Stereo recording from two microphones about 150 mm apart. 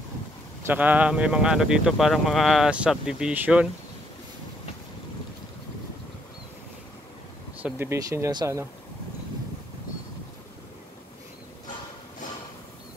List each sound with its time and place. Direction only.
0.7 s speech: 10° right (ahead or behind)
7.6 s speech: 15° right (ahead or behind)